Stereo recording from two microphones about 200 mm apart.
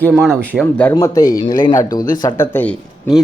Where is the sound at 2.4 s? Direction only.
10° left (ahead or behind).